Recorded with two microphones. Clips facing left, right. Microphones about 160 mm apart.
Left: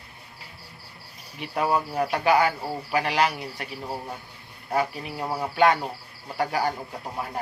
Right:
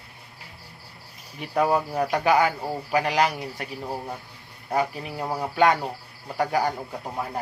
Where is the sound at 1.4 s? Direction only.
40° right (ahead or behind).